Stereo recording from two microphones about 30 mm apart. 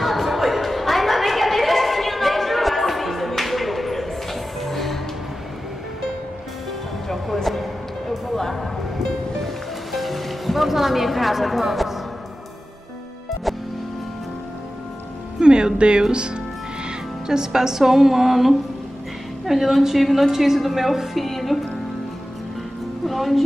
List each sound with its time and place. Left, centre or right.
0.0 s a sound: centre
7.4 s music: centre
9.9 s music: centre
15.3 s music: right
17.3 s a woman's voice: centre
21.2 s speech: centre
23.0 s music: centre